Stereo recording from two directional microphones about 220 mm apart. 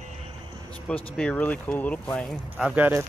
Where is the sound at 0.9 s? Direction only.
5° left (ahead or behind).